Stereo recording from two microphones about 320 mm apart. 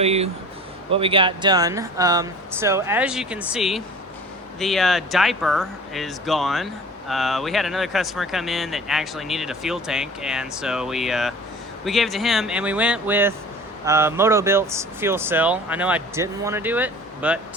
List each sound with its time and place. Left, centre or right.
0.0 s speech: centre